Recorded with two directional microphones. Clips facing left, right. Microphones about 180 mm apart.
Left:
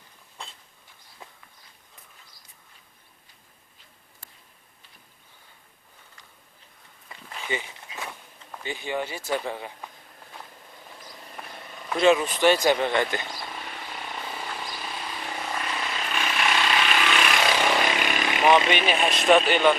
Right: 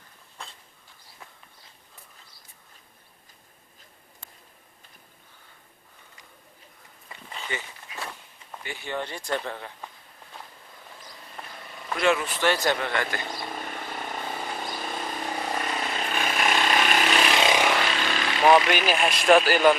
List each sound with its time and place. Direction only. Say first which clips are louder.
7.4 s walk: left 4 dB; 15° left (ahead or behind)
8.6 s speech: left 3 dB; 15° left (ahead or behind)
11.4 s vehicle: even; 5° left (ahead or behind)
11.9 s speech: left 4 dB; 20° left (ahead or behind)
13.6 s vehicle: right 3 dB; 45° right (ahead or behind)
15.1 s vehicle: right 2 dB; 40° right (ahead or behind)
17.3 s vehicle: right 2 dB; 20° right (ahead or behind)
17.7 s vehicle: left 1 dB; 15° left (ahead or behind)
18.7 s speech: even; centre (ahead or behind)